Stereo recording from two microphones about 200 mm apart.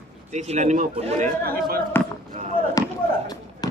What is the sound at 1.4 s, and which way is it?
Speech, 50° right (ahead or behind).